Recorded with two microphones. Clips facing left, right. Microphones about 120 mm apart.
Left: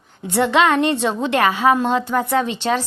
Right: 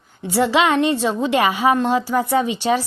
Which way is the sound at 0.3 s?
5° right (ahead or behind).